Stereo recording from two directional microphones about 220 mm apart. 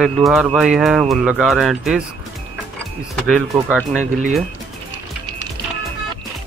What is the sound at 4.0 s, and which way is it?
Speech, 35° right (ahead or behind).